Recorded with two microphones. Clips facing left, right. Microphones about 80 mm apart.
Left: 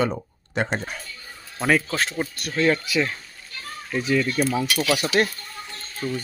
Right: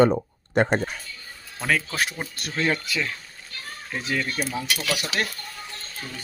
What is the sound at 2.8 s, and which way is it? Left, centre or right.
Speech, centre.